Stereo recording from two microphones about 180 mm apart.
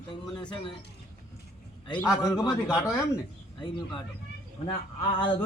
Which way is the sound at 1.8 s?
20° left (ahead or behind).